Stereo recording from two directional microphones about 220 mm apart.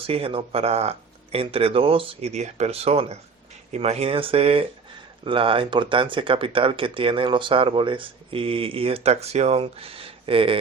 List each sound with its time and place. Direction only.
0.0 s speech: 25° right (ahead or behind)